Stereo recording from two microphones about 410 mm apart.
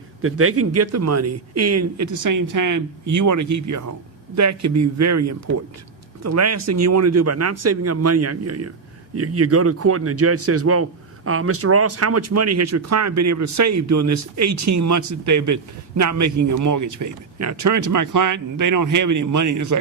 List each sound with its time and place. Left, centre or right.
0.2 s a man's voice: right